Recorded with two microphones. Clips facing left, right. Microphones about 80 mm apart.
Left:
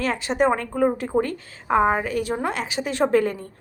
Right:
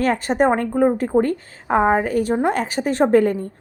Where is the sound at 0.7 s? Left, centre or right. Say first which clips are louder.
Right 4 dB; right.